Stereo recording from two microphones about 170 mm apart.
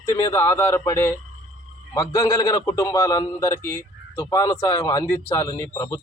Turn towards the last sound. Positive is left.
turn(degrees=15)  # may be behind; listen again after turning